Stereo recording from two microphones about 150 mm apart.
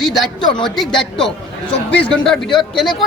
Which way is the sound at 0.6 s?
5° left (ahead or behind).